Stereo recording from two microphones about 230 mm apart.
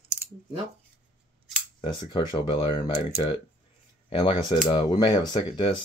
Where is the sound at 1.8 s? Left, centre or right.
Left.